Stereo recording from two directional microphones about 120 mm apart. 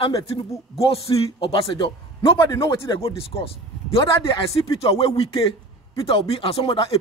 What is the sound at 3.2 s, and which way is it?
A man's voice, 50° left (ahead or behind).